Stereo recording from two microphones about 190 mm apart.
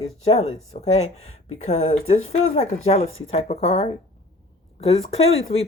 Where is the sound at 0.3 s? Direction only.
35° left (ahead or behind).